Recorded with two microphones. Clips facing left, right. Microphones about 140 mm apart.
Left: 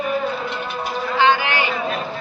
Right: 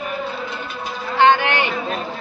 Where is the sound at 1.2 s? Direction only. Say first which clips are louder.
Right 3 dB; 60° right (ahead or behind).